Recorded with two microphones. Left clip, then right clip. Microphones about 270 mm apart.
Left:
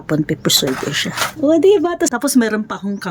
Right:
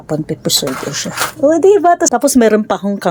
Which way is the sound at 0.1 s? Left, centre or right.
Centre.